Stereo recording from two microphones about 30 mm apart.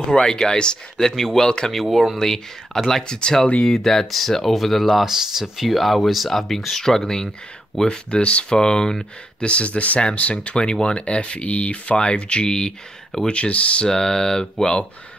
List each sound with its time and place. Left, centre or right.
0.1 s speech: left
3.0 s speech: left
3.6 s speech: centre
5.0 s speech: centre
5.7 s speech: centre
7.8 s speech: left
8.2 s speech: left
8.5 s speech: left
9.4 s speech: left
10.5 s speech: left
11.1 s speech: left
12.0 s speech: left
13.3 s speech: left
13.8 s speech: left